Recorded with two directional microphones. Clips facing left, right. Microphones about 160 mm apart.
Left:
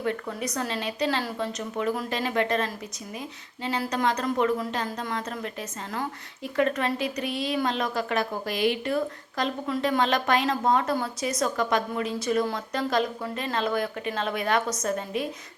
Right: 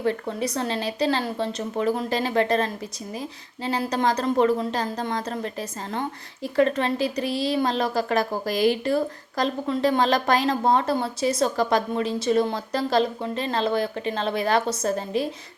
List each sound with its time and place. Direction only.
0.0 s a woman's voice: 30° right (ahead or behind)